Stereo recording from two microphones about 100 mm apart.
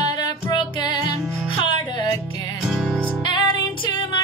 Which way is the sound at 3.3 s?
55° left (ahead or behind).